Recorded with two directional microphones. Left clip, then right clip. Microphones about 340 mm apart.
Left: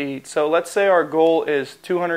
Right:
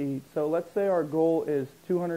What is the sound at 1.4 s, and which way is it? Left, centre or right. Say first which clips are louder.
Speech: left 8 dB; centre.